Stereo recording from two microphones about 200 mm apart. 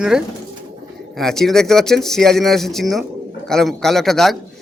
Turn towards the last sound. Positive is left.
turn(degrees=0)  # may be behind; listen again after turning